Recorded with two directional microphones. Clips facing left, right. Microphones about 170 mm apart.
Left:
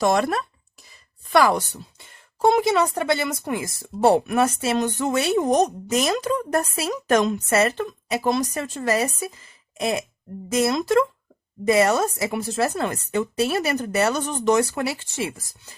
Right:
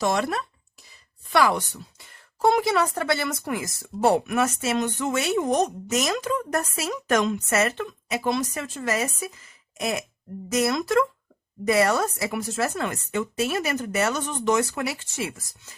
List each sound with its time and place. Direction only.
0.0 s speech: 50° left (ahead or behind)
2.4 s speech: 20° left (ahead or behind)
10.5 s speech: 25° left (ahead or behind)